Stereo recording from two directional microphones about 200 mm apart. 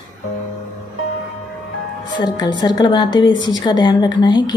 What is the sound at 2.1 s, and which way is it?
A woman's voice, 20° left (ahead or behind).